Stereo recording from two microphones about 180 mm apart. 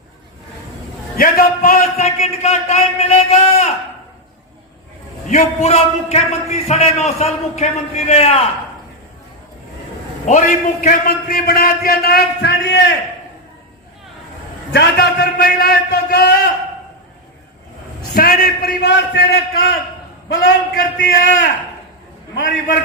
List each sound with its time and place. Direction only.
1.1 s a man's voice: 50° left (ahead or behind); by 3.7 s 35° left (ahead or behind)
5.3 s a man's voice: 40° left (ahead or behind)
10.2 s a man's voice: 45° left (ahead or behind); by 12.8 s 70° left (ahead or behind)
14.7 s a man's voice: 65° left (ahead or behind)
18.1 s a man's voice: 55° left (ahead or behind)
20.7 s a sound: 50° left (ahead or behind)
22.4 s a sound: 50° left (ahead or behind)